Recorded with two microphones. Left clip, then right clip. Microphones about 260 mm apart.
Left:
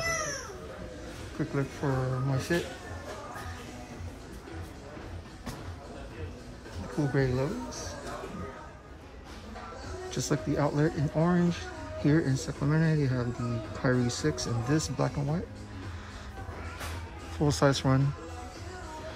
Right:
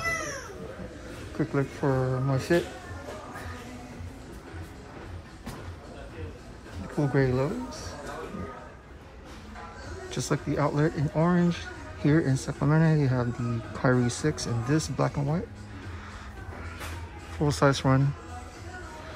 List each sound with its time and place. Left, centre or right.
1.4 s speech: centre
7.0 s speech: centre
10.1 s speech: centre
17.4 s speech: centre